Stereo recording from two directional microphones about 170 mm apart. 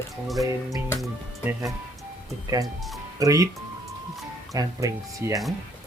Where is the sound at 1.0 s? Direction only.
10° right (ahead or behind).